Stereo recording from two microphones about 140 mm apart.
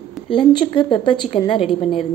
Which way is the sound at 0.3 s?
35° left (ahead or behind).